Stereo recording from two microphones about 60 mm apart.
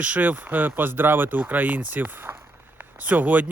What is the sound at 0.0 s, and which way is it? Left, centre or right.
Speech, right.